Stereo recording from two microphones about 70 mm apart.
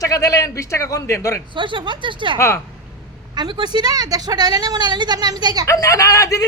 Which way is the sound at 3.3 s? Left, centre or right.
Right.